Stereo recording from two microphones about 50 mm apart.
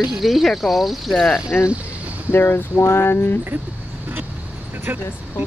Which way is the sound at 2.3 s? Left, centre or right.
Left.